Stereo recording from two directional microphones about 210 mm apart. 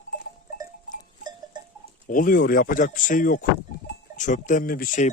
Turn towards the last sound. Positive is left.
turn(degrees=40)  # may be behind; listen again after turning